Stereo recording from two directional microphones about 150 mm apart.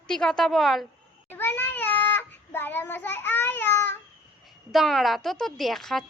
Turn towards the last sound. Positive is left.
turn(degrees=0)  # may be behind; listen again after turning